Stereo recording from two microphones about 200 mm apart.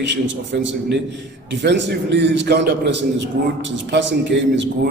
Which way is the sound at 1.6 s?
60° right (ahead or behind).